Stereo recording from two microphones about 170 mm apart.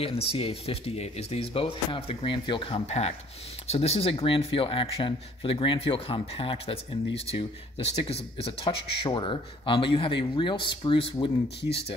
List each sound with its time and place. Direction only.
0.3 s speech: 35° left (ahead or behind)